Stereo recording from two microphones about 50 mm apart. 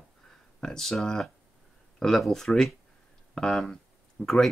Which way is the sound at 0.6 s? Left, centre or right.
Centre.